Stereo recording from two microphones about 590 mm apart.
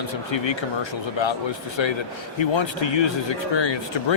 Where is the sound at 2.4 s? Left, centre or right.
Left.